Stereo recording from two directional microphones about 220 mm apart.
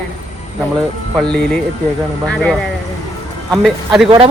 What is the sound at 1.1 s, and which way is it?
A man's voice, 5° left (ahead or behind).